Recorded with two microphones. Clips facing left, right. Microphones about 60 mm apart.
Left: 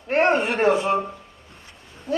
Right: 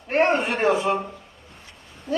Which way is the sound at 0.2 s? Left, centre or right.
Left.